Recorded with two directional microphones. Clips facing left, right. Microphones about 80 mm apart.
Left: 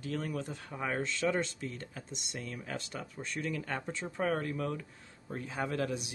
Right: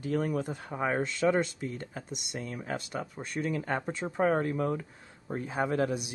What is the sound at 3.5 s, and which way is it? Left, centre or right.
Speech, right.